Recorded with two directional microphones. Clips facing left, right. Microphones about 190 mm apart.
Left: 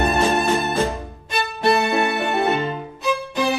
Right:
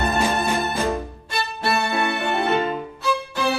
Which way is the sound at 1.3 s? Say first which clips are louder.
Left 5 dB; 20° left (ahead or behind).